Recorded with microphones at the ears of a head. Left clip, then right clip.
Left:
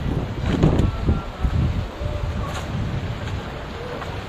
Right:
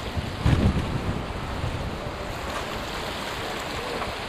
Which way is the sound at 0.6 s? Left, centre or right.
Left.